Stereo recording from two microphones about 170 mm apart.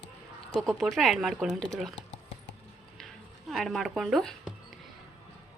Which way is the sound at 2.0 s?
90° left.